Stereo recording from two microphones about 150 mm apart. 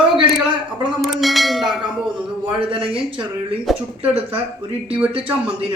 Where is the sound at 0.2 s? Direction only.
35° right (ahead or behind).